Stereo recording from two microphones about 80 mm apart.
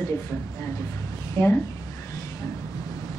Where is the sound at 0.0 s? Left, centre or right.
Left.